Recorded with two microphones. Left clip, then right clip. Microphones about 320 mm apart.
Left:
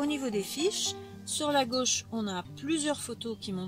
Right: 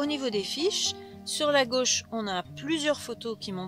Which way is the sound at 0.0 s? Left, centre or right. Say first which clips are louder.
Right 3 dB; right.